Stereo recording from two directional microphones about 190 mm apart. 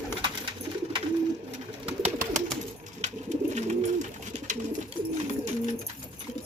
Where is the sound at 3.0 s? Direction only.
40° right (ahead or behind).